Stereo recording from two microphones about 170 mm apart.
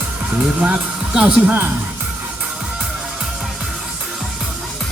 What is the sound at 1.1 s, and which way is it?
Speech, 10° right (ahead or behind).